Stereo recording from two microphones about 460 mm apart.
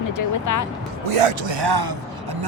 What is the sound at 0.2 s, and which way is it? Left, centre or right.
Speech, left.